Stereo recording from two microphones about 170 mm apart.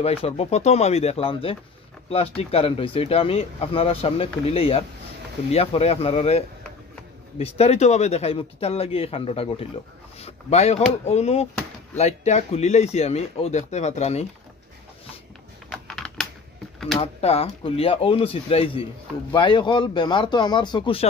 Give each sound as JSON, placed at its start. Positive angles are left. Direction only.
{"t": 0.0, "sound": "speech", "side_deg": 35}
{"t": 15.7, "sound": "typing", "side_deg": 0}
{"t": 17.0, "sound": "speech", "side_deg": 35}